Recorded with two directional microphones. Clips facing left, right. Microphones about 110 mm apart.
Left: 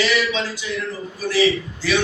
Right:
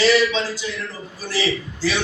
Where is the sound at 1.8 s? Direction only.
30° right (ahead or behind).